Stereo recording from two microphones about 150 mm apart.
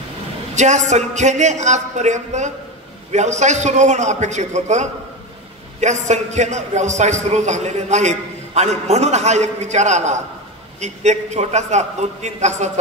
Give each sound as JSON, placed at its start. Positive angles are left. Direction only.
{"t": 0.6, "sound": "a man's voice", "side_deg": -50}